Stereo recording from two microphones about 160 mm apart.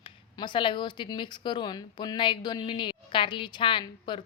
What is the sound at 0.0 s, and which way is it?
A woman's voice, 30° left (ahead or behind).